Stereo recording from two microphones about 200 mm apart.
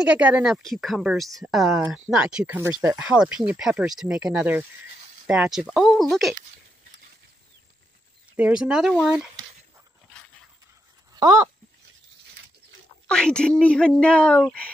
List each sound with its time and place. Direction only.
0.1 s speech: 5° right (ahead or behind)
8.4 s speech: 5° right (ahead or behind)
11.1 s a sound: 20° right (ahead or behind)
13.1 s speech: 5° left (ahead or behind)